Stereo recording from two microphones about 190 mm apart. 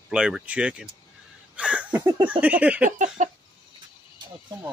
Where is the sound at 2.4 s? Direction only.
5° right (ahead or behind).